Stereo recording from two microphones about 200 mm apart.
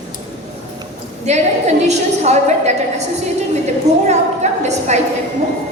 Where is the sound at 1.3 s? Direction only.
35° right (ahead or behind).